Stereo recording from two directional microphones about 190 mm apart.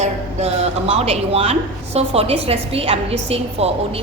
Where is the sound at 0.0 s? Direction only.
35° right (ahead or behind).